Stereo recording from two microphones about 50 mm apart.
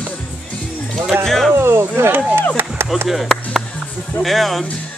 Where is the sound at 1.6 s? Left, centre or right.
Right.